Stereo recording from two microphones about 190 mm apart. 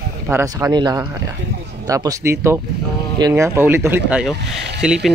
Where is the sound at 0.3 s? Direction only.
10° right (ahead or behind).